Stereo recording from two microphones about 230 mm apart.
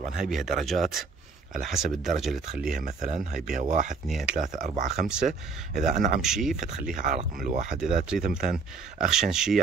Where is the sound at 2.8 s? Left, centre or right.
Right.